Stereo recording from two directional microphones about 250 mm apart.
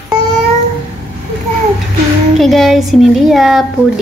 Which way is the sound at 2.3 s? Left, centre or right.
Centre.